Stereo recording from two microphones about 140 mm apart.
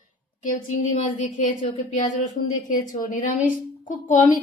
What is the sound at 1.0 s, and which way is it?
A woman's voice, 65° left (ahead or behind).